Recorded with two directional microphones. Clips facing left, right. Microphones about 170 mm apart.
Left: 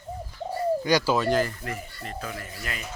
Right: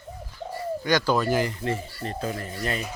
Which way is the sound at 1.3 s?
20° right (ahead or behind).